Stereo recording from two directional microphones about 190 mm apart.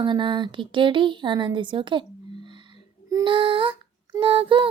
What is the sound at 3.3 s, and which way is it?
Female singing, 25° right (ahead or behind).